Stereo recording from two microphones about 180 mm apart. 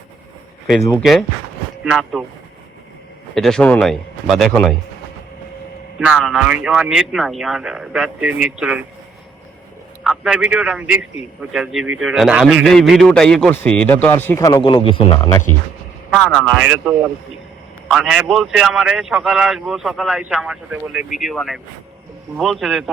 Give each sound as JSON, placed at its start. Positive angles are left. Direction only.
{"t": 0.9, "sound": "a man's voice", "side_deg": 0}
{"t": 3.3, "sound": "a man's voice", "side_deg": 0}
{"t": 6.0, "sound": "a man's voice", "side_deg": -5}
{"t": 10.0, "sound": "a man's voice", "side_deg": -5}
{"t": 14.5, "sound": "speech", "side_deg": 25}
{"t": 16.0, "sound": "a man's voice", "side_deg": 5}